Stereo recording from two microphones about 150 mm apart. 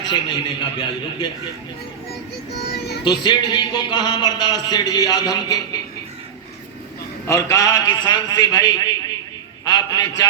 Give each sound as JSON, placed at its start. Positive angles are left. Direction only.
{"t": 0.0, "sound": "a man's voice", "side_deg": 30}
{"t": 2.5, "sound": "child singing", "side_deg": 90}
{"t": 3.0, "sound": "a man's voice", "side_deg": 30}
{"t": 7.3, "sound": "a man's voice", "side_deg": 20}
{"t": 9.6, "sound": "a sound", "side_deg": 25}